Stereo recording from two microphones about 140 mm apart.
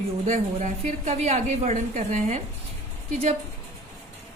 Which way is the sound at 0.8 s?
55° right (ahead or behind).